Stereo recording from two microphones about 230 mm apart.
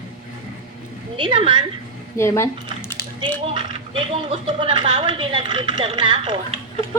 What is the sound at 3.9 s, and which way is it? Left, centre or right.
A woman's voice, right.